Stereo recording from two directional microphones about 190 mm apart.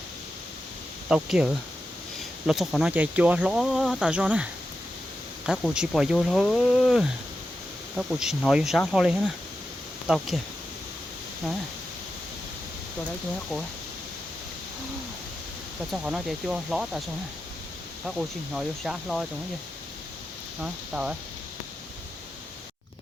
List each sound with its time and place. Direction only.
1.0 s speech: 5° right (ahead or behind)
5.5 s speech: 5° right (ahead or behind)
15.9 s speech: 5° right (ahead or behind)
18.0 s speech: 5° right (ahead or behind)
20.6 s speech: 5° right (ahead or behind)